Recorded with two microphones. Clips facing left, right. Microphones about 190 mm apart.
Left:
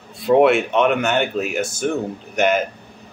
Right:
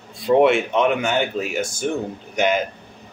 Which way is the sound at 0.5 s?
60° left (ahead or behind).